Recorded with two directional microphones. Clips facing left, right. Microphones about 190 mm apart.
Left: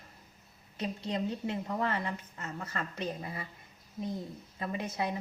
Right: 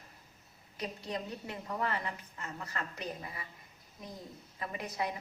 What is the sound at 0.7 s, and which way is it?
A woman's voice, 25° left (ahead or behind).